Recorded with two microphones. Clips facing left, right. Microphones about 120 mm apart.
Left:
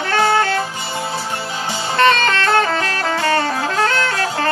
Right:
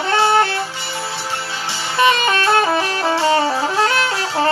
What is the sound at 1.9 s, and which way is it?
Music, 10° right (ahead or behind).